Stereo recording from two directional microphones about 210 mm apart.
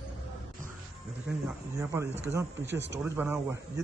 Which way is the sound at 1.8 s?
15° right (ahead or behind).